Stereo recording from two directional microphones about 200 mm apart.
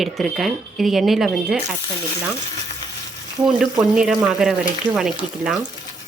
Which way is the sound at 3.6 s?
5° right (ahead or behind).